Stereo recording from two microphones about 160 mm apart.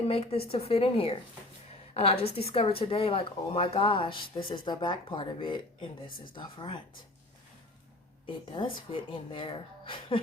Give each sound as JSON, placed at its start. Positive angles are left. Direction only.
{"t": 0.0, "sound": "speech", "side_deg": 40}
{"t": 1.9, "sound": "a sound", "side_deg": 40}
{"t": 2.2, "sound": "speech", "side_deg": 40}
{"t": 8.3, "sound": "speech", "side_deg": 30}